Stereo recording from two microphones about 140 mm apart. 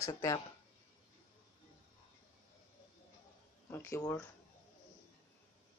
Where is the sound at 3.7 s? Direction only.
15° left (ahead or behind).